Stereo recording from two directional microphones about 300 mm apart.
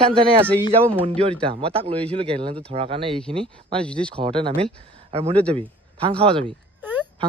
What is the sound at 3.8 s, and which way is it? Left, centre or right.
Speech, centre.